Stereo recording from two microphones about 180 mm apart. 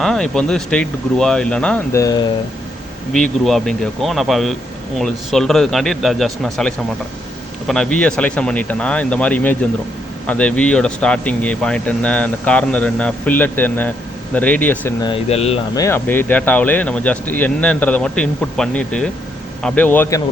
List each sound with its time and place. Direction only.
0.0 s speech: 5° left (ahead or behind)
1.9 s speech: 20° left (ahead or behind)
3.1 s speech: centre (ahead or behind)
15.0 s speech: 30° left (ahead or behind)
15.7 s speech: 15° left (ahead or behind)